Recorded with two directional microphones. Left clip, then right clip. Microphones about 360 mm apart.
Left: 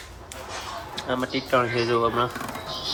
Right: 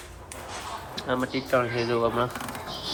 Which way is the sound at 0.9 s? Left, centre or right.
Centre.